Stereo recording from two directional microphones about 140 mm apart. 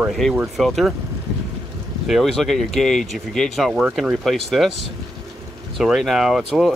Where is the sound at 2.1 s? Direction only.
Centre (ahead or behind).